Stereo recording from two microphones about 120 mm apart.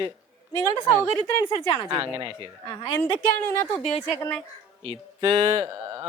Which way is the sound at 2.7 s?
40° left (ahead or behind).